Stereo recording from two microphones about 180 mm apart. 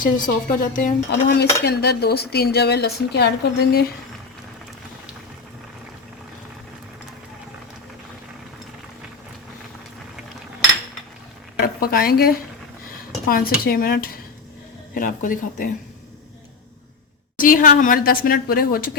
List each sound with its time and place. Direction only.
0.0 s a woman's voice: 50° left (ahead or behind)
1.6 s a woman's voice: 65° left (ahead or behind)
11.6 s a woman's voice: 55° left (ahead or behind)
17.3 s a woman's voice: 50° left (ahead or behind)